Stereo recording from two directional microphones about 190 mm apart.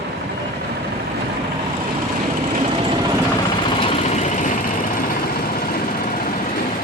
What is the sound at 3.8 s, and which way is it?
Vehicle, 30° left (ahead or behind).